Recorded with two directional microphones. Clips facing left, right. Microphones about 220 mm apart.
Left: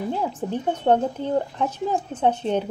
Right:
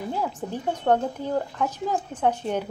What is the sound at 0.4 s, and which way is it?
A woman's voice, 20° left (ahead or behind).